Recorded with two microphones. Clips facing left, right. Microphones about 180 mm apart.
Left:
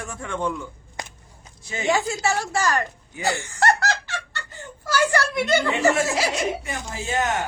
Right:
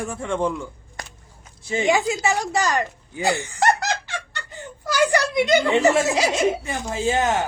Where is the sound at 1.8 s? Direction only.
15° right (ahead or behind).